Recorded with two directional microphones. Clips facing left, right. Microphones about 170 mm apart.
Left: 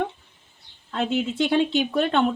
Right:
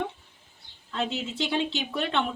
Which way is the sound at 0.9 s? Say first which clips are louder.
Left 6 dB; 55° left (ahead or behind).